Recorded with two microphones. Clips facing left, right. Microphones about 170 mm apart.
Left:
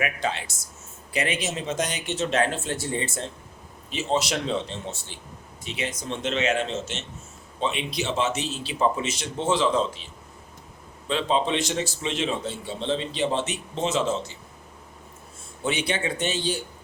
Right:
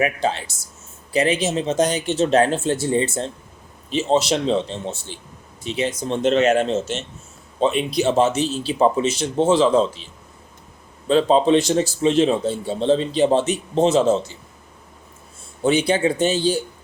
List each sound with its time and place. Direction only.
0.0 s speech: 30° right (ahead or behind)
11.1 s speech: 40° right (ahead or behind)
15.6 s speech: 35° right (ahead or behind)